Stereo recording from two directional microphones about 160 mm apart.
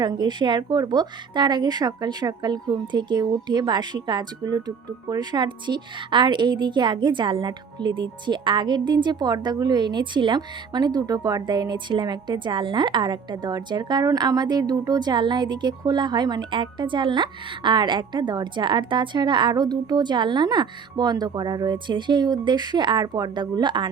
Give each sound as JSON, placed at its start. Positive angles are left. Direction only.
{"t": 0.0, "sound": "a woman's voice", "side_deg": -25}